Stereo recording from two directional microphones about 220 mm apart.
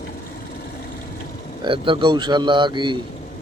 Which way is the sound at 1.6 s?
25° right (ahead or behind).